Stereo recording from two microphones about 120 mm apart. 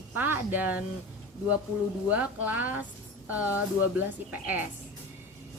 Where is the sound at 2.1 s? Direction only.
15° right (ahead or behind).